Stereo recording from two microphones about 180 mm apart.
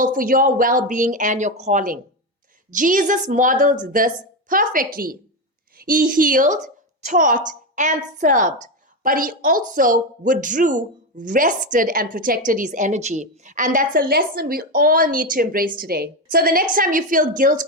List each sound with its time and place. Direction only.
0.0 s a woman's voice: 50° right (ahead or behind)